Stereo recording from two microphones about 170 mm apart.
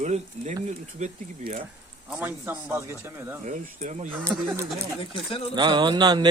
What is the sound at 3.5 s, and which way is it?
Speech, 45° right (ahead or behind).